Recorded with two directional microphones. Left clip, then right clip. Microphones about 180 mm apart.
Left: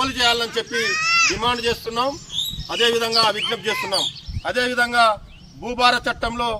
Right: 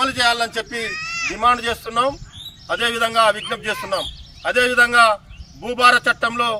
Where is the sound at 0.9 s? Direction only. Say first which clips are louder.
Left 7 dB; 30° left (ahead or behind).